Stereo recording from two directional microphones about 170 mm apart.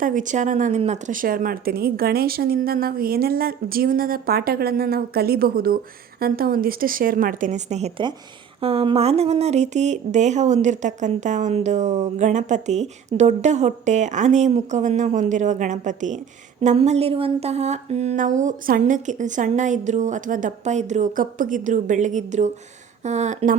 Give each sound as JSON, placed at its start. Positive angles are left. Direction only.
{"t": 0.0, "sound": "speech", "side_deg": -50}